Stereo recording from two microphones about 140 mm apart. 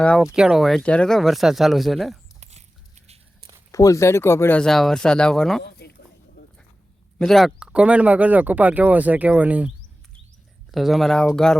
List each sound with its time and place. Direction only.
0.3 s speech: 5° right (ahead or behind)
2.4 s biting: 55° right (ahead or behind)
3.7 s speech: 25° left (ahead or behind); by 5.6 s 5° left (ahead or behind)
7.2 s speech: centre (ahead or behind)